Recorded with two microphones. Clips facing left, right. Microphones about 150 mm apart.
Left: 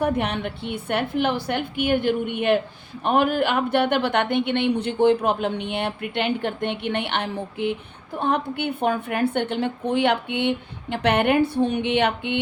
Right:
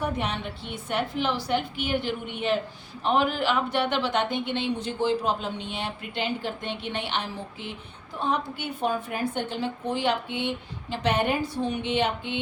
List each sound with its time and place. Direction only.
0.0 s a woman's voice: 60° left (ahead or behind)